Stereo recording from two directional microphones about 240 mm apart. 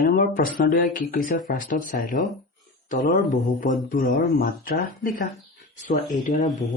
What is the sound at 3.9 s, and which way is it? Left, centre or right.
Speech, left.